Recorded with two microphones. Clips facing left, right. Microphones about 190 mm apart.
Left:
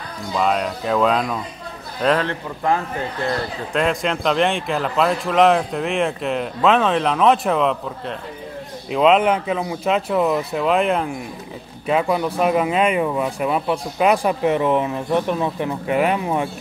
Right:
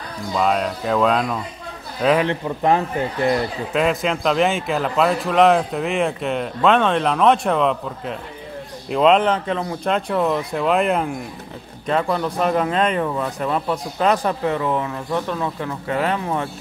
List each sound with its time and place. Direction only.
0.3 s a man's voice: centre (ahead or behind)
2.2 s a man's voice: 20° right (ahead or behind)
3.7 s speech: centre (ahead or behind); by 16.4 s 15° left (ahead or behind)